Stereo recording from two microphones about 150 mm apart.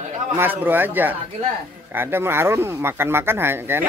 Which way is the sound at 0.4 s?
15° right (ahead or behind).